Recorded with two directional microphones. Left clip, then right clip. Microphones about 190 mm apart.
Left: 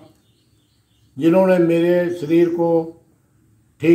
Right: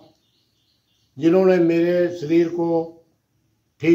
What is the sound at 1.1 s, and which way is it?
A man's voice, 20° right (ahead or behind).